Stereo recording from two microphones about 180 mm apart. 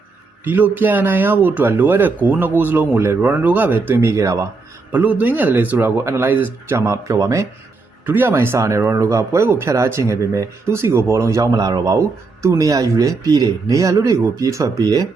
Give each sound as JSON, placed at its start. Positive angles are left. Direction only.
{"t": 0.4, "sound": "speech", "side_deg": -10}